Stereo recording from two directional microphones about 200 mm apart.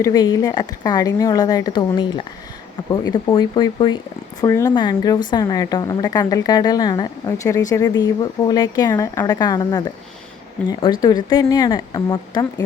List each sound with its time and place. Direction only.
0.0 s speech: 20° left (ahead or behind)